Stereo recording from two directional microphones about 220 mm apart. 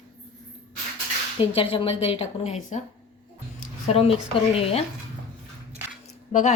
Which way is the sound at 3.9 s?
25° left (ahead or behind).